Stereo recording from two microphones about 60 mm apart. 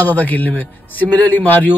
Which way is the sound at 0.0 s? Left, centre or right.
Left.